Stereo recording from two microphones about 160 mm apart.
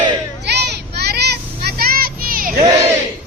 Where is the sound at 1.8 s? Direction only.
70° right (ahead or behind).